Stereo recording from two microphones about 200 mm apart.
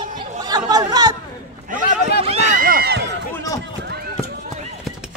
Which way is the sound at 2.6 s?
45° right (ahead or behind).